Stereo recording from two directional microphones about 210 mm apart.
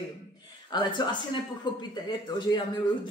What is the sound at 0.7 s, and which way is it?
Speech, 20° left (ahead or behind).